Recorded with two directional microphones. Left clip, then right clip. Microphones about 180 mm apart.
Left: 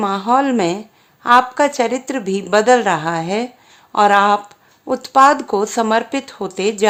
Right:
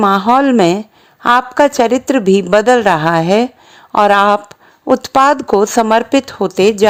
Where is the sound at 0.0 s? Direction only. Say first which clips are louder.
Right 5 dB; 40° right (ahead or behind).